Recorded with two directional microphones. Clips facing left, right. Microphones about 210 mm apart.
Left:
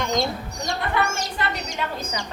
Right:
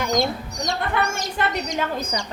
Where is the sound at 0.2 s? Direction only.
20° right (ahead or behind).